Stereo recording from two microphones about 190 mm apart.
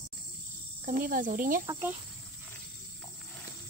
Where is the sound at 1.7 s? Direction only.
10° right (ahead or behind).